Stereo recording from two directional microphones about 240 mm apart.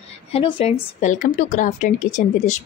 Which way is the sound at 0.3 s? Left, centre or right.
Left.